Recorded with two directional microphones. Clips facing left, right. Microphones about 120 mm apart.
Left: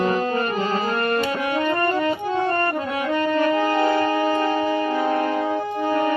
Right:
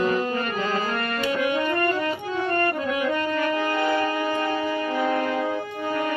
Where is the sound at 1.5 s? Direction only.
35° left (ahead or behind).